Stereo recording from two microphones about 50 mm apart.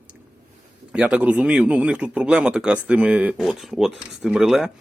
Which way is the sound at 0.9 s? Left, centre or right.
Centre.